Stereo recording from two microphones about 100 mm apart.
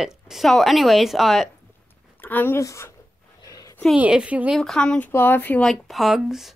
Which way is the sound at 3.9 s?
10° right (ahead or behind).